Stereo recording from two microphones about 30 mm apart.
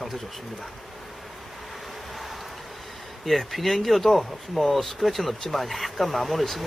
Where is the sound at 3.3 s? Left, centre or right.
Centre.